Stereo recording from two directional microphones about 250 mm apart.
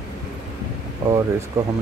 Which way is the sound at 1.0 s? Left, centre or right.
Centre.